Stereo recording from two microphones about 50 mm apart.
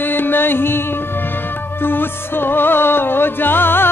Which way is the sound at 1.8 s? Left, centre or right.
Left.